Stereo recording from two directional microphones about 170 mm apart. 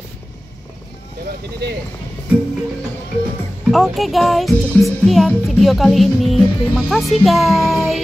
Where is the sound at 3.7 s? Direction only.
Centre (ahead or behind).